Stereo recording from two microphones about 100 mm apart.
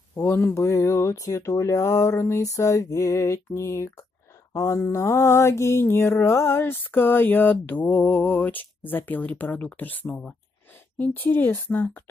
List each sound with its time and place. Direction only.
0.1 s mantra: 25° left (ahead or behind)
10.0 s speech: 10° left (ahead or behind)
10.7 s speech: 20° left (ahead or behind)